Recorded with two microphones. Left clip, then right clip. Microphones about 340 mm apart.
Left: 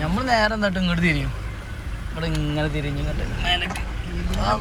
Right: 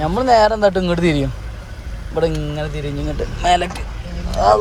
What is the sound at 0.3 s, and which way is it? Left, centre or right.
Speech, centre.